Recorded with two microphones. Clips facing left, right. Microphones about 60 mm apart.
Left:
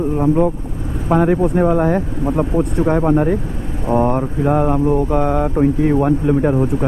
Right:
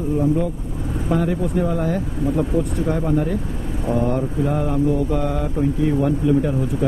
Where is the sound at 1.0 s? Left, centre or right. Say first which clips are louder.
Left 7 dB; left.